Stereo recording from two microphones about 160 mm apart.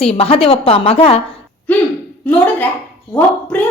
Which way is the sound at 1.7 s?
10° left (ahead or behind).